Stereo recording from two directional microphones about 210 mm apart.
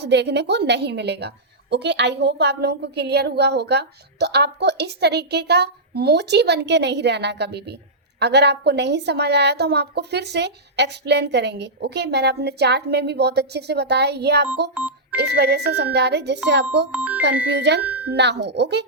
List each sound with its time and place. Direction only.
0.0 s a woman's voice: 55° right (ahead or behind)
16.9 s speech: 5° right (ahead or behind)
17.6 s speech: 55° right (ahead or behind)
17.8 s speech: 5° right (ahead or behind)
18.1 s a woman's voice: 55° right (ahead or behind)